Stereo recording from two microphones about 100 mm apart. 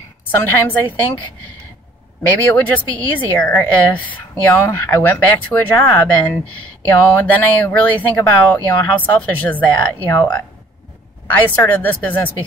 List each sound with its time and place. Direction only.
0.3 s speech: 20° left (ahead or behind)
2.2 s speech: 15° left (ahead or behind)
11.3 s speech: 15° left (ahead or behind)